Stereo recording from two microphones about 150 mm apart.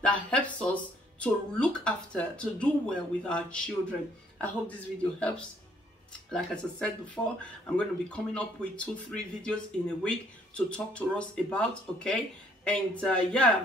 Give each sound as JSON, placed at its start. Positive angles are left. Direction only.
{"t": 0.0, "sound": "speech", "side_deg": 5}
{"t": 6.3, "sound": "speech", "side_deg": 5}